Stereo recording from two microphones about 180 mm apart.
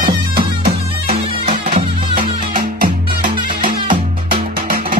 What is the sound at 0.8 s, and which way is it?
Music, 35° right (ahead or behind).